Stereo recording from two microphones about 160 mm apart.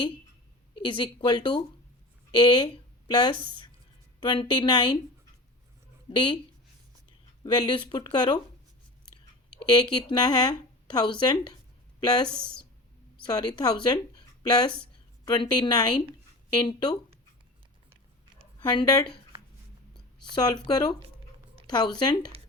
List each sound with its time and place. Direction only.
0.8 s speech: 30° left (ahead or behind)
6.1 s speech: 30° left (ahead or behind)
7.4 s speech: 25° left (ahead or behind)
9.6 s a woman's voice: 25° left (ahead or behind)
18.6 s speech: 25° left (ahead or behind)
20.3 s speech: 25° left (ahead or behind)